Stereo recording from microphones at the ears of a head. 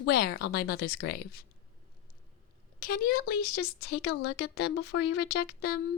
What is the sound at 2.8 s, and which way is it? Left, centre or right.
Speech, left.